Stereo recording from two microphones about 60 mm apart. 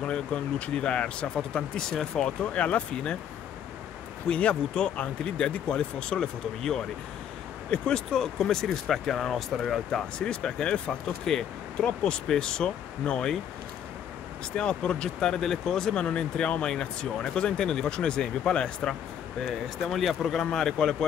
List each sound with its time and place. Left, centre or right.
0.0 s speech: centre
2.4 s speech: left
4.3 s speech: centre
14.5 s speech: centre
19.4 s speech: centre